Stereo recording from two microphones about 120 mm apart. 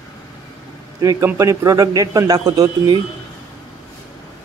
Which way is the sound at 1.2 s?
25° right (ahead or behind).